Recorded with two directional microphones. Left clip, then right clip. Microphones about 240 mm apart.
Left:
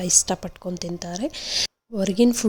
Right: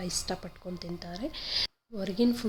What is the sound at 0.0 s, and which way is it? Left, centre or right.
Speech, left.